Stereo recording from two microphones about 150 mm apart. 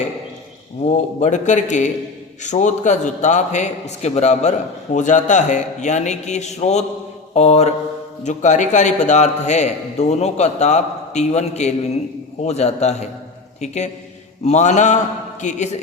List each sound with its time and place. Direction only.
0.9 s a man's voice: 50° left (ahead or behind)